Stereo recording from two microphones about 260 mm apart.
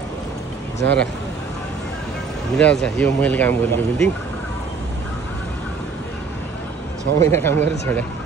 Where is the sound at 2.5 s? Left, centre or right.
Centre.